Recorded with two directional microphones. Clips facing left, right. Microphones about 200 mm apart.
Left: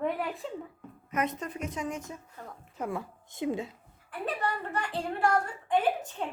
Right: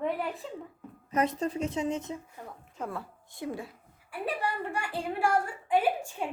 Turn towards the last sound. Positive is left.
turn(degrees=-10)  # may be behind; listen again after turning